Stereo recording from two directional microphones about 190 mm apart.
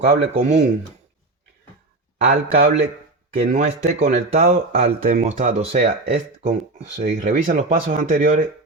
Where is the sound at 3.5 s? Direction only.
40° right (ahead or behind).